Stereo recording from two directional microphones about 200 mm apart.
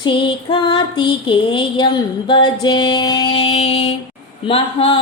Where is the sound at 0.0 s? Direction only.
25° left (ahead or behind).